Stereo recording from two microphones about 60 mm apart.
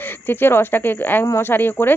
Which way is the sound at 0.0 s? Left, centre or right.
Left.